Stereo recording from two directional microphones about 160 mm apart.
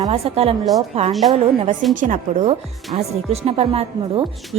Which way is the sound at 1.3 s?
40° right (ahead or behind).